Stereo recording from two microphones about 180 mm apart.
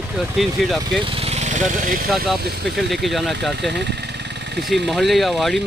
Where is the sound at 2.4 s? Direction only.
65° right (ahead or behind).